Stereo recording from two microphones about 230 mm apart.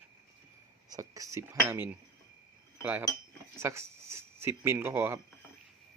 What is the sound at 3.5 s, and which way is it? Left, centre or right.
Speech, centre.